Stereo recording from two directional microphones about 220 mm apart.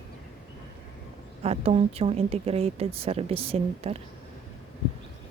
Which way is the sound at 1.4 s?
25° right (ahead or behind).